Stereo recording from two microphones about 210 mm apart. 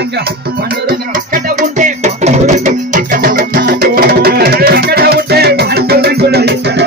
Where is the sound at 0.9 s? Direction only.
40° right (ahead or behind).